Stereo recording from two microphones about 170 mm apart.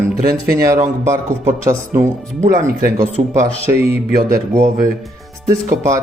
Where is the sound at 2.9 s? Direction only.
45° right (ahead or behind).